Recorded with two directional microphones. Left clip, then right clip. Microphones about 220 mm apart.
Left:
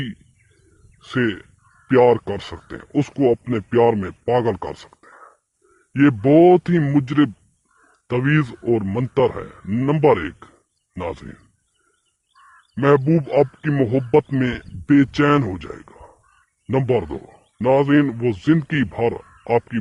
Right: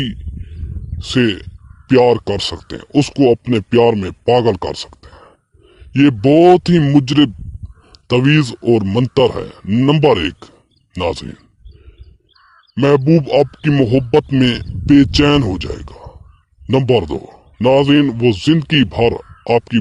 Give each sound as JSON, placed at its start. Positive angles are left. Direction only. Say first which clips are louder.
{"t": 0.9, "sound": "a man's voice", "louder": "right 6 dB", "side_deg": -40}
{"t": 9.6, "sound": "speech", "louder": "right 4 dB", "side_deg": -35}
{"t": 12.4, "sound": "crow", "louder": "even", "side_deg": 5}
{"t": 12.7, "sound": "speech", "louder": "right 4 dB", "side_deg": -45}